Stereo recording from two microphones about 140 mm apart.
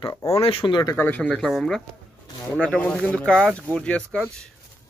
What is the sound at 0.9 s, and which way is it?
Speech, 15° left (ahead or behind).